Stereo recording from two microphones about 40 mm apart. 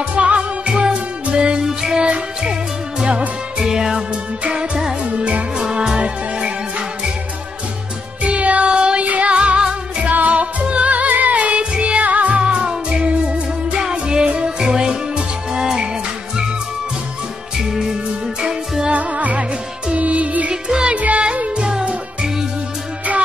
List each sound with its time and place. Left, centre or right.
0.1 s music: right
5.0 s music: right
8.2 s music: right
10.0 s music: right
11.7 s music: right
12.0 s music: right
12.4 s music: right
13.7 s music: centre
14.2 s music: right
14.6 s music: centre
17.6 s music: centre
18.9 s music: right
20.6 s music: centre
20.9 s music: right; by 22.3 s centre